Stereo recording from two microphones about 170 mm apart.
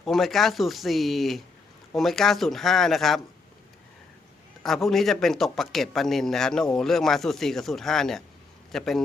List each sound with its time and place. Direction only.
0.0 s a man's voice: centre (ahead or behind)
4.6 s a man's voice: centre (ahead or behind)